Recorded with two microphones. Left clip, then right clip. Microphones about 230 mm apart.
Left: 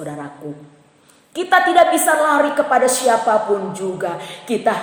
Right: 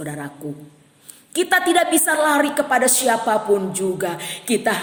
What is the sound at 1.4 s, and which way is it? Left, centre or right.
A woman's voice, right.